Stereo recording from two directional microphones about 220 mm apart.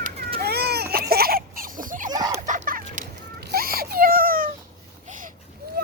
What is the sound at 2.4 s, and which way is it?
Baby cry, 35° right (ahead or behind).